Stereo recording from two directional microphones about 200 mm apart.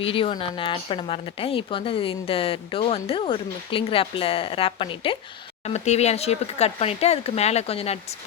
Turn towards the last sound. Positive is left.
turn(degrees=30)  # may be behind; listen again after turning